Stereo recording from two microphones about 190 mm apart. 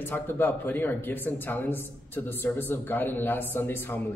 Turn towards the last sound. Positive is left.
turn(degrees=10)  # may be behind; listen again after turning